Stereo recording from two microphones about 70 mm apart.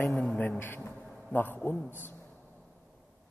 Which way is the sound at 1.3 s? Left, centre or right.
Left.